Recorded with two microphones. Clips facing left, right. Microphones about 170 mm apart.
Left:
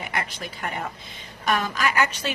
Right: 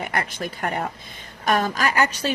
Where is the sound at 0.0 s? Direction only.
50° right (ahead or behind).